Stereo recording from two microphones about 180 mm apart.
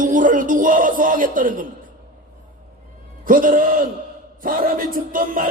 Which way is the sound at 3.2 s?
50° right (ahead or behind).